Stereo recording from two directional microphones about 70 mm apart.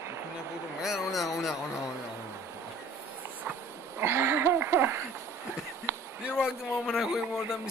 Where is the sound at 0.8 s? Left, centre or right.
Centre.